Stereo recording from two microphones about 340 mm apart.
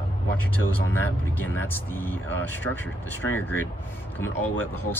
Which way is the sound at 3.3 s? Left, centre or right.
Centre.